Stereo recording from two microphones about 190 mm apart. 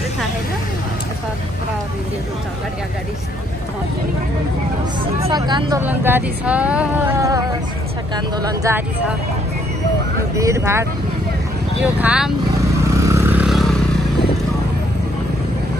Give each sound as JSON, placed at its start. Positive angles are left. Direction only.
{"t": 5.3, "sound": "speech", "side_deg": -20}
{"t": 5.8, "sound": "speech", "side_deg": -10}
{"t": 10.3, "sound": "speech", "side_deg": -15}
{"t": 12.8, "sound": "vehicle", "side_deg": -15}